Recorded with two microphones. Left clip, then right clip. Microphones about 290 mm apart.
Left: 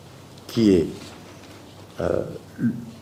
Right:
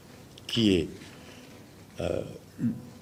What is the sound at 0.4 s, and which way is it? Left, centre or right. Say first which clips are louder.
Speech: left 6 dB; centre.